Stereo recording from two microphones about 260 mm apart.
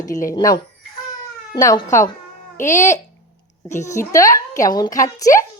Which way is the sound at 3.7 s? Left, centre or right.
Left.